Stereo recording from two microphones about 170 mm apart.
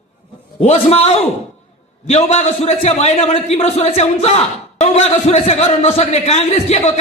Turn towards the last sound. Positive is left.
turn(degrees=35)  # may be behind; listen again after turning